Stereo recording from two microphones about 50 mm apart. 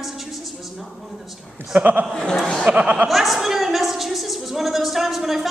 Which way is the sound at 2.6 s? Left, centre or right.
Right.